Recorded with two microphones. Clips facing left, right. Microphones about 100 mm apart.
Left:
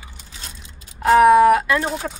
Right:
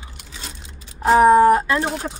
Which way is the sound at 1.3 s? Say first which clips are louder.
Even; 30° right (ahead or behind).